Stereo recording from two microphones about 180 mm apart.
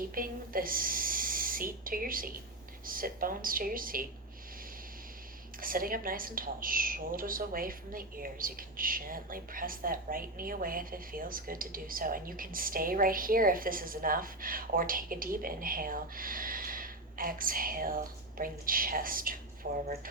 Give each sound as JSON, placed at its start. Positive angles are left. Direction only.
{"t": 0.1, "sound": "speech", "side_deg": -50}
{"t": 5.5, "sound": "speech", "side_deg": -50}